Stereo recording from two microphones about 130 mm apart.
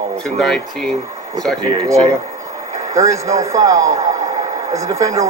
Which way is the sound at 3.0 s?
25° right (ahead or behind).